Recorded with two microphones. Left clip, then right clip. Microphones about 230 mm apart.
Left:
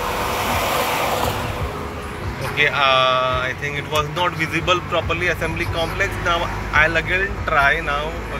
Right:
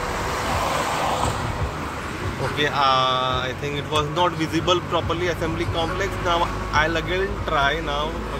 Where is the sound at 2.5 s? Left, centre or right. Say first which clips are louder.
Left 4 dB; centre.